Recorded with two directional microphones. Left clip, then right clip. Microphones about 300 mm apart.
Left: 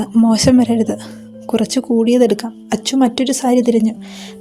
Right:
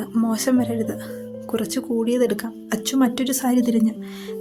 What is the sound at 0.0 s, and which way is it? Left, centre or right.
Speech, right.